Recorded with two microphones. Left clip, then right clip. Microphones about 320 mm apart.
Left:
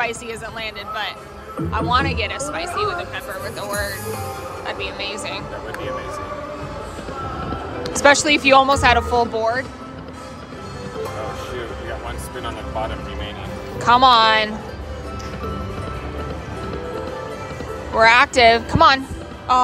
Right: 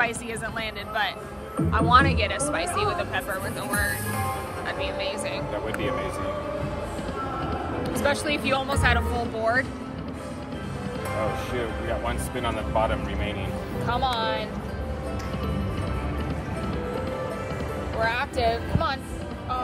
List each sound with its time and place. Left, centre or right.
0.6 s a woman's voice: centre
3.6 s speech: centre
7.8 s speech: left
13.8 s speech: left
18.0 s speech: left